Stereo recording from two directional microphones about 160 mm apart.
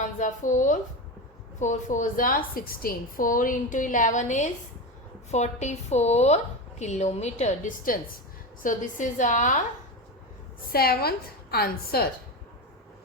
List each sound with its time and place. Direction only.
0.2 s a woman's voice: 50° left (ahead or behind)
10.7 s a woman's voice: 75° left (ahead or behind)